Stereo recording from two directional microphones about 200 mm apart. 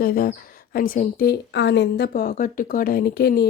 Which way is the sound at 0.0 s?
45° left (ahead or behind).